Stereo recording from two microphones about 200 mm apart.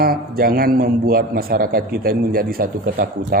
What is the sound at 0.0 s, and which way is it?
Speech, 50° right (ahead or behind).